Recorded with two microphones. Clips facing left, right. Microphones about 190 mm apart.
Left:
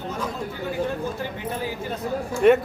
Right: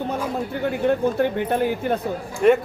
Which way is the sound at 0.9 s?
60° right (ahead or behind).